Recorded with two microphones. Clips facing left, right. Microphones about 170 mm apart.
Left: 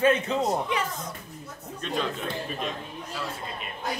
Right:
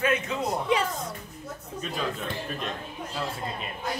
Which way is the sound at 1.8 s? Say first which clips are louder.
Left 2 dB; 5° right (ahead or behind).